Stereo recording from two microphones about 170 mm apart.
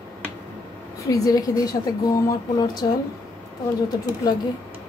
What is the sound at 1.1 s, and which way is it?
A woman's voice, 20° left (ahead or behind).